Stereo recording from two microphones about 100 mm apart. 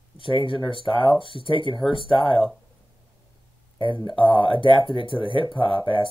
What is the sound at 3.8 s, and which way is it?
Speech, 50° left (ahead or behind).